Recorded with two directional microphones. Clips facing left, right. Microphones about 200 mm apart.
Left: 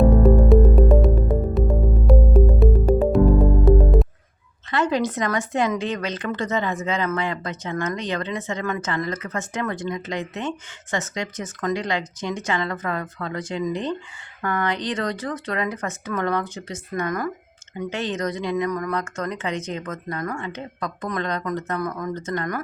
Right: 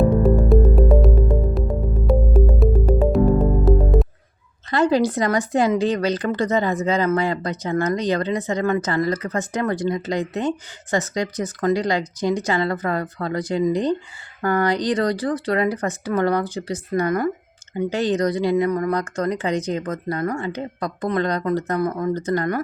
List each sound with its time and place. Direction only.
0.2 s music: centre (ahead or behind)
4.7 s speech: 35° right (ahead or behind)